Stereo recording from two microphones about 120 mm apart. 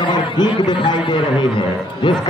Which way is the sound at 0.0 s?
40° left (ahead or behind).